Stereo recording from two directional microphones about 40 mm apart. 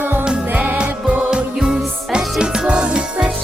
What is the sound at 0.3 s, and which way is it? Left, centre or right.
Music, right.